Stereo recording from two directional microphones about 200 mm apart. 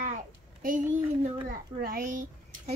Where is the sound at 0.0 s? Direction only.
45° right (ahead or behind).